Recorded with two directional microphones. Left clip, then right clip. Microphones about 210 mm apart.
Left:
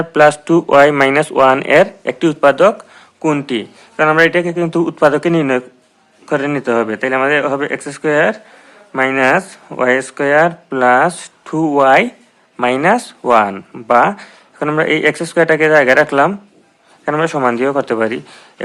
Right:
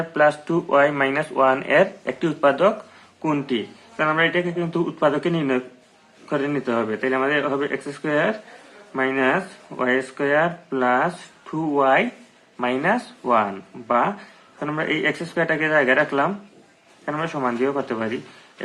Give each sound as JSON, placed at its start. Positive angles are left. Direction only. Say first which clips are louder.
{"t": 0.1, "sound": "speech", "louder": "left 9 dB", "side_deg": 40}